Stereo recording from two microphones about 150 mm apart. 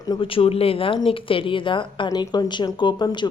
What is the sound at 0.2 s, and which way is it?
A woman's voice, 35° left (ahead or behind).